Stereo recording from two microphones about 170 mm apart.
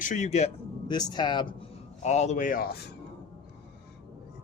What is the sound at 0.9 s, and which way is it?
Speech, 25° left (ahead or behind).